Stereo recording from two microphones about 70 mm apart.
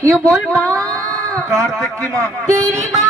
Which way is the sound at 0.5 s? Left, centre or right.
Right.